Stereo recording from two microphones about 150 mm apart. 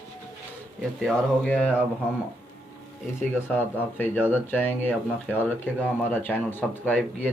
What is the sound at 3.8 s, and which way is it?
Speech, 10° left (ahead or behind).